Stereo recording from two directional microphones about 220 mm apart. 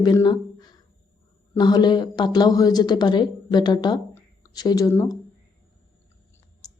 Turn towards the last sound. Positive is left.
turn(degrees=15)  # may be behind; listen again after turning